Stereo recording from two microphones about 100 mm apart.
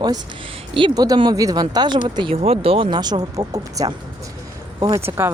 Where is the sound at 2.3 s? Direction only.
75° right (ahead or behind).